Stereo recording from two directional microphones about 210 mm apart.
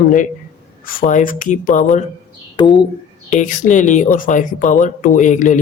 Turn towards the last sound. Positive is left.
turn(degrees=35)  # may be behind; listen again after turning